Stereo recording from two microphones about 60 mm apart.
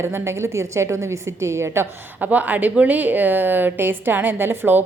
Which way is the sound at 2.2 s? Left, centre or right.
Right.